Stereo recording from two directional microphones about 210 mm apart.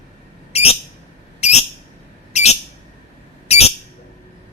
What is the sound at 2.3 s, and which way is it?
Bird, 30° left (ahead or behind).